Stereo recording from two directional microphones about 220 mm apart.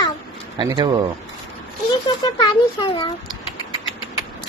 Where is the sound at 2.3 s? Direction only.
20° left (ahead or behind).